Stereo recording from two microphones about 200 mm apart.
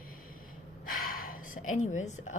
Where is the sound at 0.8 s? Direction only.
45° left (ahead or behind).